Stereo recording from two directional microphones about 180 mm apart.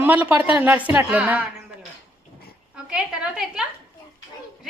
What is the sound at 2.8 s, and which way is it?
Speech, 5° right (ahead or behind).